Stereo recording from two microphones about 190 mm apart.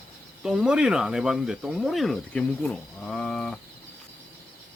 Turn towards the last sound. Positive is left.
turn(degrees=5)  # may be behind; listen again after turning